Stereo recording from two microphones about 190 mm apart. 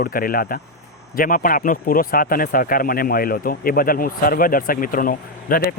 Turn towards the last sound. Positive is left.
turn(degrees=50)  # may be behind; listen again after turning